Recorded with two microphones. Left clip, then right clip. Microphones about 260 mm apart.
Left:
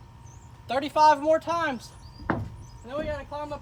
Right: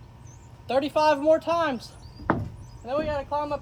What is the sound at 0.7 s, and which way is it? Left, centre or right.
Speech, centre.